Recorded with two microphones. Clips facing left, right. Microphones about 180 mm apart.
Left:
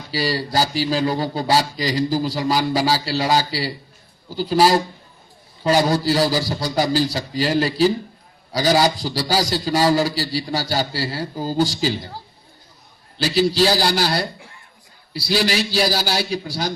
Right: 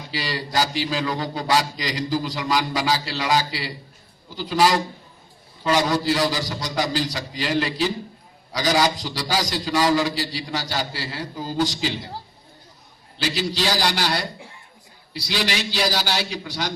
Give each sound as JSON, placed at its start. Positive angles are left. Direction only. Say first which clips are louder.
{"t": 0.1, "sound": "a man's voice", "louder": "left 5 dB", "side_deg": 35}
{"t": 13.2, "sound": "a man's voice", "louder": "left 7 dB", "side_deg": 35}